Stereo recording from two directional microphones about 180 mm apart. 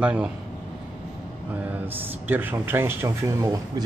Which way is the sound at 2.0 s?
10° right (ahead or behind).